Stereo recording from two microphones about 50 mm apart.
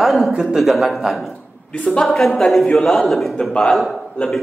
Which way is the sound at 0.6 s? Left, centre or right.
Centre.